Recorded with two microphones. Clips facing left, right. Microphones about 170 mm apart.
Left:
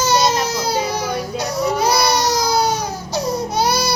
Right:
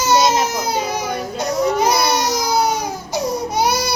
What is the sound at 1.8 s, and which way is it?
Baby cry, 20° right (ahead or behind).